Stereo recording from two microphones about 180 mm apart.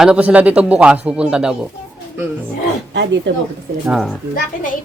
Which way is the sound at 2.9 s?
80° right.